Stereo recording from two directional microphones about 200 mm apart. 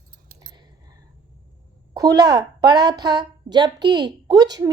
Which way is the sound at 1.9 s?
20° right (ahead or behind).